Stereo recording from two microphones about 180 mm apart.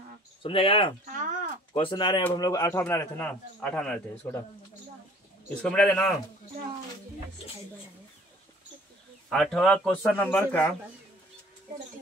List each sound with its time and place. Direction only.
0.4 s speech: 30° left (ahead or behind)
1.0 s a sound: 45° right (ahead or behind)
1.7 s speech: 30° left (ahead or behind); by 4.4 s 5° left (ahead or behind)
5.6 s a man's voice: 5° left (ahead or behind)
9.3 s a man's voice: centre (ahead or behind)